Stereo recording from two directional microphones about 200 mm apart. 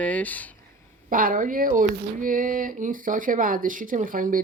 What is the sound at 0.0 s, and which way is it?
Speech, 10° left (ahead or behind).